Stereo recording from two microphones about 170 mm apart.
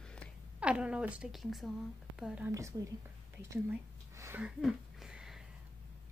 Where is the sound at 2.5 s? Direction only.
20° right (ahead or behind).